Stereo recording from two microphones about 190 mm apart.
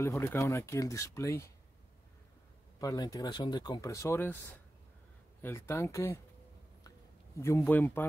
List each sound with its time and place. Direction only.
0.0 s speech: 15° left (ahead or behind)
2.8 s speech: 20° left (ahead or behind)
5.4 s speech: 10° left (ahead or behind)
7.3 s speech: 15° left (ahead or behind)